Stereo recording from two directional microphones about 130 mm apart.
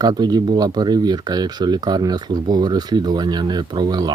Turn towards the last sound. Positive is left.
turn(degrees=-35)  # may be behind; listen again after turning